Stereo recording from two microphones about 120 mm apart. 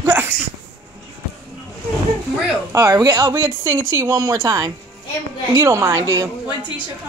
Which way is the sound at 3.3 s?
20° right (ahead or behind).